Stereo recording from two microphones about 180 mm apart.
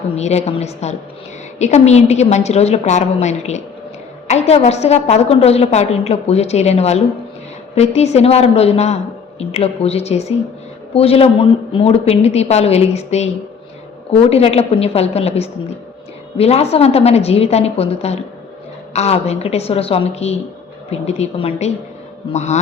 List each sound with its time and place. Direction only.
0.2 s a woman's voice: 35° left (ahead or behind)